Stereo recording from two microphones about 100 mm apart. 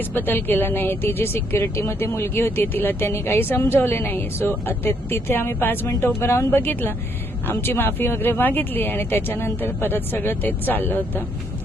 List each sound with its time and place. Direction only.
0.1 s a woman's voice: 20° left (ahead or behind)